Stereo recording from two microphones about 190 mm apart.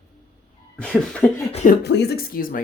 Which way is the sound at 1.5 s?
35° left (ahead or behind).